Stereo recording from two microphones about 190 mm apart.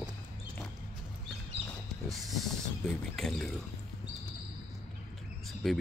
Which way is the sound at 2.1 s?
Centre (ahead or behind).